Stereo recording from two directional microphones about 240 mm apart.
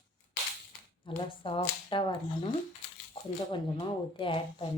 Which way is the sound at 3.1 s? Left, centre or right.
Centre.